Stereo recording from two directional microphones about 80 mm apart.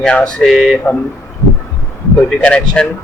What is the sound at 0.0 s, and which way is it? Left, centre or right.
Speech, centre.